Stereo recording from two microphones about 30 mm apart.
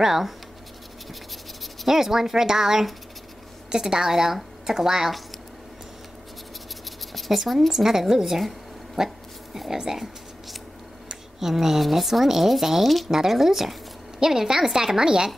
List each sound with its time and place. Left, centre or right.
0.0 s speech: centre
1.9 s speech: centre
4.1 s speech: centre
7.2 s speech: centre
11.3 s speech: centre